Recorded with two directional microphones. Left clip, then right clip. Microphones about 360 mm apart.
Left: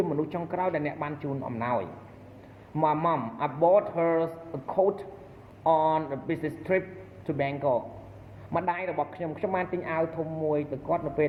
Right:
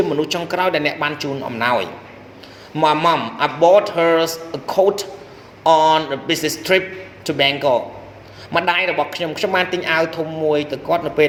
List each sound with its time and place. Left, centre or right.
0.0 s speech: right